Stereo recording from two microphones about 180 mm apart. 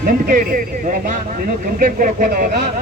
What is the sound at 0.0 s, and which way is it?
Speech, 50° right (ahead or behind).